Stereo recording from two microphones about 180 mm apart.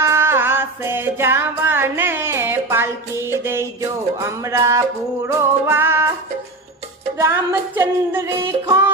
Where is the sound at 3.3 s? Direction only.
15° right (ahead or behind).